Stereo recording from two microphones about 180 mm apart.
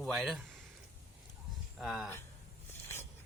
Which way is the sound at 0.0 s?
Centre (ahead or behind).